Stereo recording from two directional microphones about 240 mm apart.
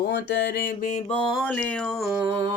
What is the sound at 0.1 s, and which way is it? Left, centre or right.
Mantra, left.